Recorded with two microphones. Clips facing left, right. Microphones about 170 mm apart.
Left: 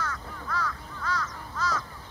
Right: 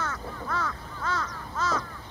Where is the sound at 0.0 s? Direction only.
25° right (ahead or behind).